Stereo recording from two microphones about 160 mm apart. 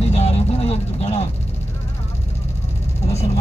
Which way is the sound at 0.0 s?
40° left (ahead or behind).